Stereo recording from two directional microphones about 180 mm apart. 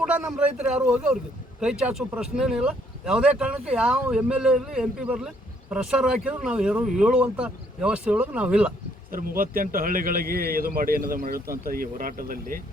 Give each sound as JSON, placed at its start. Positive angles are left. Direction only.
{"t": 0.0, "sound": "a man's voice", "side_deg": -5}
{"t": 9.1, "sound": "a man's voice", "side_deg": -50}